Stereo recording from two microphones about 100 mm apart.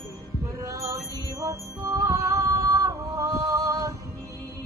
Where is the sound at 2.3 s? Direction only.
35° right (ahead or behind).